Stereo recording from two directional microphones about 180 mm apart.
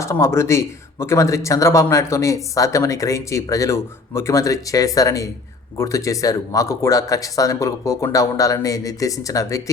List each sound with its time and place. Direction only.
0.0 s speech: 15° left (ahead or behind)